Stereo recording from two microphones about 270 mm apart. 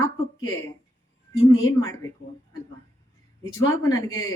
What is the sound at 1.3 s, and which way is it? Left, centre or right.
Speech, left.